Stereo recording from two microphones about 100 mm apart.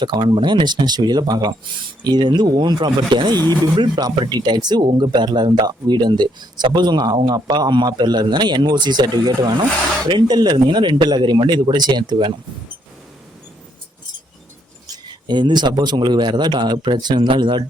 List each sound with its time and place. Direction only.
0.0 s speech: 50° right (ahead or behind)
14.8 s speech: 50° right (ahead or behind)